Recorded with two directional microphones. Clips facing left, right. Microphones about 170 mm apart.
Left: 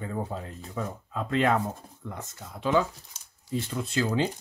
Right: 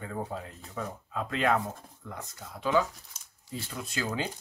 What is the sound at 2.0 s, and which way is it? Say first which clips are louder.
Speech: left 3 dB; 25° left (ahead or behind).